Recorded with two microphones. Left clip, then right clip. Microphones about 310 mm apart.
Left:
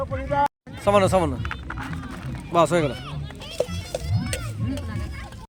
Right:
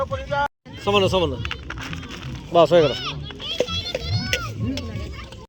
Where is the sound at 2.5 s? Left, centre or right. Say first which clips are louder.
Right 5 dB; left.